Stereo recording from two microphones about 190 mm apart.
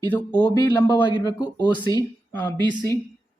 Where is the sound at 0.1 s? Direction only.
5° left (ahead or behind).